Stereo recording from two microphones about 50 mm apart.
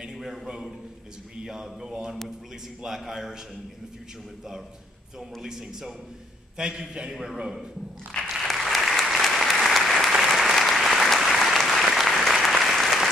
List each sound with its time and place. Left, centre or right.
1.4 s a man's voice: centre
5.4 s a man's voice: centre
8.4 s applause: centre